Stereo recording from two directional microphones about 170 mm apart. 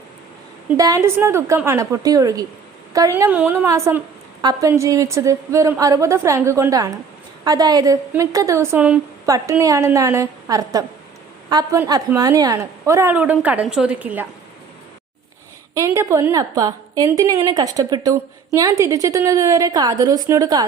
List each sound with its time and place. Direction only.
0.8 s a woman's voice: 20° right (ahead or behind)
15.7 s a woman's voice: 20° right (ahead or behind)